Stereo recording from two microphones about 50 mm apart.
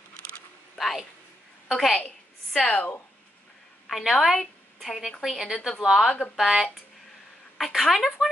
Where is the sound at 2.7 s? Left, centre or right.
Left.